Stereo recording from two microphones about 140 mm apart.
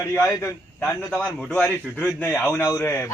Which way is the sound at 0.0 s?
20° left (ahead or behind).